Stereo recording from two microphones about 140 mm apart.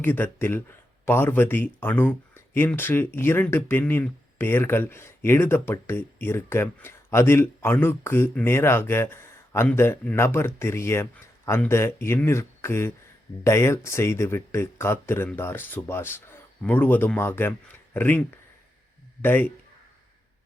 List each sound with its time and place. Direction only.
0.0 s speech: 15° left (ahead or behind)